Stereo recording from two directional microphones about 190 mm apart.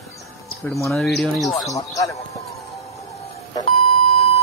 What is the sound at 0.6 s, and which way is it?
Speech, 15° left (ahead or behind).